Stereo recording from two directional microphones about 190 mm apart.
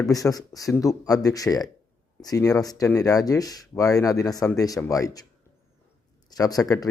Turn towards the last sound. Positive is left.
turn(degrees=20)  # may be behind; listen again after turning